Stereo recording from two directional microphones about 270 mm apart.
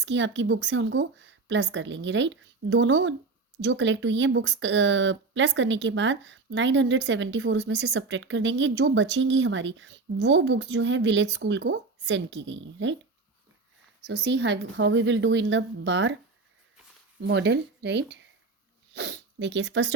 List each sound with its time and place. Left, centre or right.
0.0 s speech: right
14.1 s speech: right
17.2 s speech: right